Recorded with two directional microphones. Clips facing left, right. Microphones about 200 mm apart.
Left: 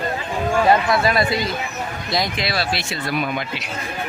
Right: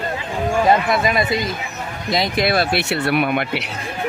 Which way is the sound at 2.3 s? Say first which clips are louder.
Right 6 dB; 50° right (ahead or behind).